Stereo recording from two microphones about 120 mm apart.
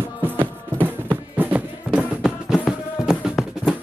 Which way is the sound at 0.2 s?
15° right (ahead or behind).